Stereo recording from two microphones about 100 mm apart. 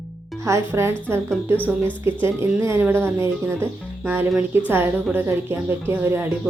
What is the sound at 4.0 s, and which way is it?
Speech, 15° right (ahead or behind).